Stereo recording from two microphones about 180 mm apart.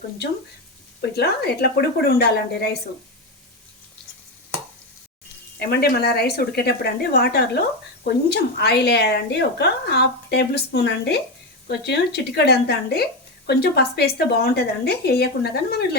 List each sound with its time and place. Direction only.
1.1 s a woman's voice: 65° left (ahead or behind)
5.5 s a woman's voice: 60° left (ahead or behind)